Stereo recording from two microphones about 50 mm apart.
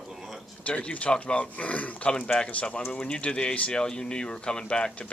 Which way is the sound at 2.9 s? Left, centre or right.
Centre.